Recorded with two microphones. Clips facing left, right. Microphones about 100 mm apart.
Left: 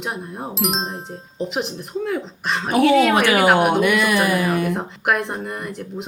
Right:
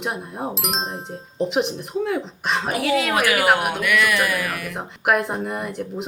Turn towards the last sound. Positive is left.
turn(degrees=0)  # may be behind; listen again after turning